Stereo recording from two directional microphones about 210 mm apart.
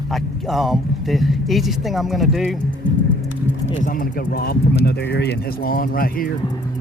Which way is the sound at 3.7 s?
40° left (ahead or behind).